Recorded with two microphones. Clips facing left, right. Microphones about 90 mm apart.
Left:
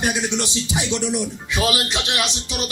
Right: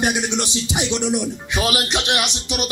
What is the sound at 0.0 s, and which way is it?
Speech, 20° right (ahead or behind).